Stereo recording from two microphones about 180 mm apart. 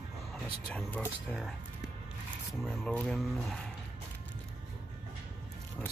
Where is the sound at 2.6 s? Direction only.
5° left (ahead or behind).